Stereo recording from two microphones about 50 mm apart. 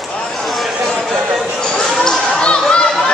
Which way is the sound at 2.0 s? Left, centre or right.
Centre.